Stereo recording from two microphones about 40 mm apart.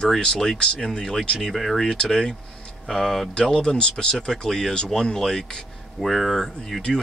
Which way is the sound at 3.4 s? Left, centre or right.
Left.